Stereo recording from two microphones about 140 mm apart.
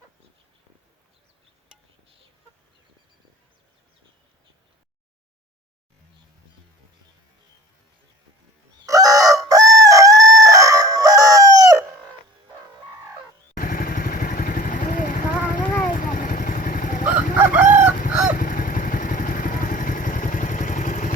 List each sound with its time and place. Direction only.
8.9 s chicken: 25° right (ahead or behind)
13.6 s vehicle: 90° left; by 17.0 s 75° left (ahead or behind)
17.1 s chicken: 10° right (ahead or behind)
18.1 s honk: 5° right (ahead or behind)
18.3 s vehicle: 80° left; by 21.1 s 65° left (ahead or behind)